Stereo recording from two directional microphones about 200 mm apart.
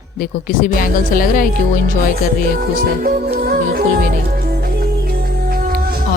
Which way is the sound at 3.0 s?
50° right (ahead or behind).